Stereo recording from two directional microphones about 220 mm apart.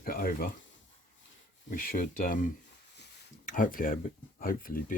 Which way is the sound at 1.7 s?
40° left (ahead or behind).